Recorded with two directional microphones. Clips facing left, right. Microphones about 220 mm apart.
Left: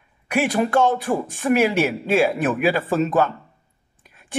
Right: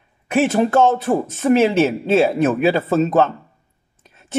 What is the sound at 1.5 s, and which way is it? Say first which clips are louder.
A woman's voice: right 4 dB; 25° right (ahead or behind).